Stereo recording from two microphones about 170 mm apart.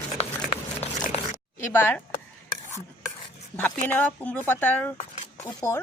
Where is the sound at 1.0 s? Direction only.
50° left (ahead or behind).